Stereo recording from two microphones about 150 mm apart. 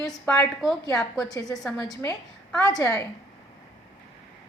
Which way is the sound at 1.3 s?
25° left (ahead or behind).